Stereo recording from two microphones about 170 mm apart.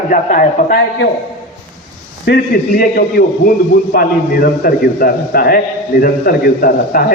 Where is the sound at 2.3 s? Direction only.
65° left (ahead or behind).